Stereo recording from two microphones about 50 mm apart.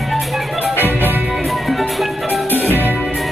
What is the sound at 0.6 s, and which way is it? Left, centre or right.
Music, right.